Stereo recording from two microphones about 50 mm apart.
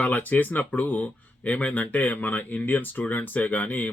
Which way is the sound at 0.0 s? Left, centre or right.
Left.